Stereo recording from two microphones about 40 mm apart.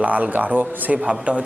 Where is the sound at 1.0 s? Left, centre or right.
Right.